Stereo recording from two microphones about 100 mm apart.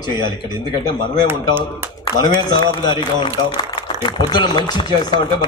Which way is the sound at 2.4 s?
45° left (ahead or behind).